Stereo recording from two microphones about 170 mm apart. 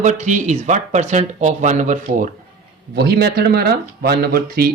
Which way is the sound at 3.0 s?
70° right (ahead or behind).